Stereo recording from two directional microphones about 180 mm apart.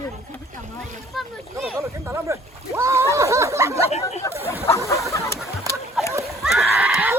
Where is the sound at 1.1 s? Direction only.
Centre (ahead or behind).